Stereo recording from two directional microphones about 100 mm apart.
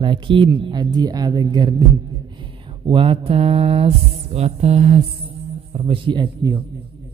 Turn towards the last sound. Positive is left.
turn(degrees=-45)  # may be behind; listen again after turning